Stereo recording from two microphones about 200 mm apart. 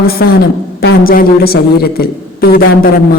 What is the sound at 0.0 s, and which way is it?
A woman's voice, 50° left (ahead or behind).